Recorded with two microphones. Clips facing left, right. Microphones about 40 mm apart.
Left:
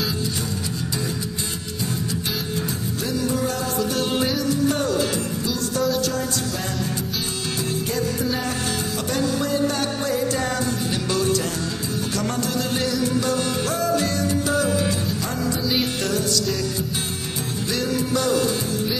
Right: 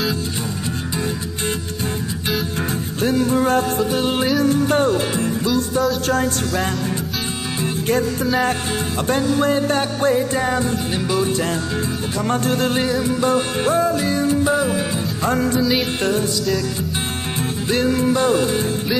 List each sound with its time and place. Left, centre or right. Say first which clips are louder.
3.0 s music: right 7 dB; right
3.8 s music: right 3 dB; right
4.4 s music: right 5 dB; right
5.5 s music: right 4 dB; centre
6.0 s music: right 6 dB; right
8.4 s music: right 5 dB; right
12.4 s music: right 6 dB; right
12.7 s music: right 3 dB; right
15.2 s music: right 11 dB; right
16.0 s music: right 5 dB; right
17.6 s music: right 7 dB; right